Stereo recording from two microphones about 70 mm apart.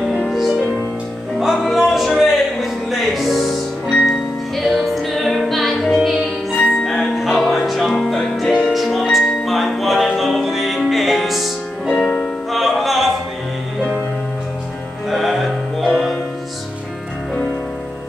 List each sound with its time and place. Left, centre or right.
0.3 s music: centre
4.6 s music: centre
11.9 s music: centre
12.4 s music: centre
15.0 s music: centre